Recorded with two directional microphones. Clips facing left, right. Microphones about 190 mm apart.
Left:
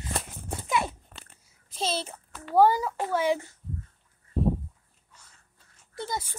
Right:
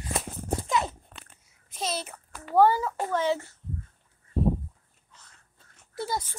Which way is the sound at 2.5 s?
10° left (ahead or behind).